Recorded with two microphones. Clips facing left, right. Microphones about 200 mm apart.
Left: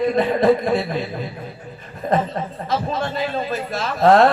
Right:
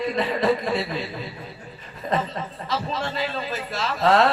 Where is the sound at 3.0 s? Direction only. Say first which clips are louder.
Left 4 dB; 50° left (ahead or behind).